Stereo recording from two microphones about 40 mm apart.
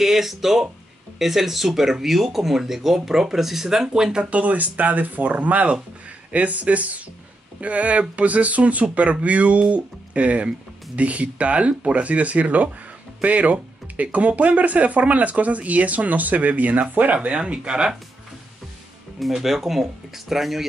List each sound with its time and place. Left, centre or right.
0.0 s speech: centre
4.3 s speech: right
17.4 s speech: right
19.3 s speech: centre